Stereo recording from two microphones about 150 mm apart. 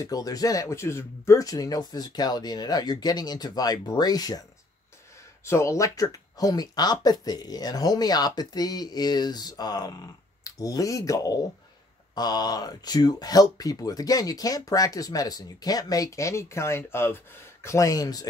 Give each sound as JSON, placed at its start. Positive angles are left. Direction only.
{"t": 0.0, "sound": "speech", "side_deg": 25}